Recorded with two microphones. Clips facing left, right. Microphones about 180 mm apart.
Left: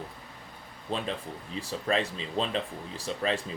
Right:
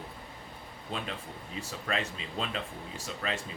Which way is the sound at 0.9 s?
30° left (ahead or behind).